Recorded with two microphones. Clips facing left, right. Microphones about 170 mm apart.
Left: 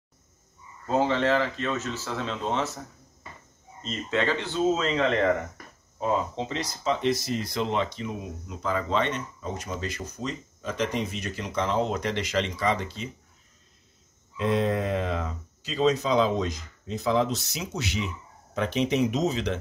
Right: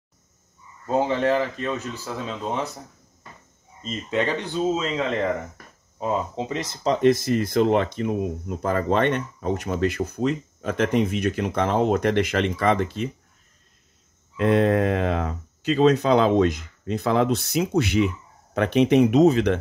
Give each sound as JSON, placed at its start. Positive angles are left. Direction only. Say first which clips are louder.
{"t": 0.8, "sound": "speech", "louder": "right 2 dB", "side_deg": -15}
{"t": 3.8, "sound": "speech", "louder": "right 2 dB", "side_deg": -15}
{"t": 6.8, "sound": "speech", "louder": "right 7 dB", "side_deg": -45}
{"t": 14.3, "sound": "speech", "louder": "right 6 dB", "side_deg": -60}